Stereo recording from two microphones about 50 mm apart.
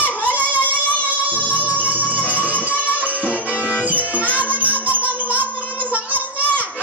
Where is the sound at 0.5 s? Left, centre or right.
Right.